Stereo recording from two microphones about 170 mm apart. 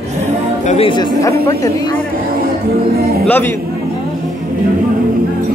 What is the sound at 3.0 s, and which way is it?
Speech, 65° right (ahead or behind).